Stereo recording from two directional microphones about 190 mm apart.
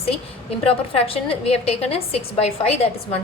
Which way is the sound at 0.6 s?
30° left (ahead or behind).